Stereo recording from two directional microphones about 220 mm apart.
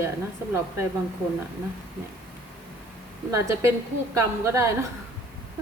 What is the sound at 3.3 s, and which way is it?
Speech, 15° right (ahead or behind).